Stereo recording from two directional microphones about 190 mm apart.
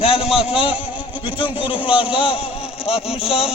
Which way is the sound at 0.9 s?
5° right (ahead or behind).